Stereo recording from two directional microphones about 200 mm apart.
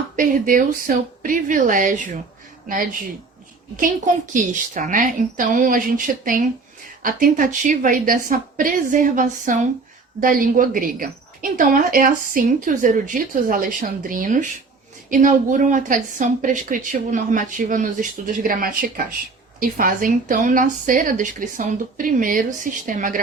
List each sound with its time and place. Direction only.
0.2 s a woman's voice: 40° right (ahead or behind)